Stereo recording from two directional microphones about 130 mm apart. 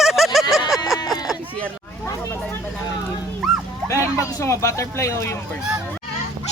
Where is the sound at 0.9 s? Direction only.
30° left (ahead or behind).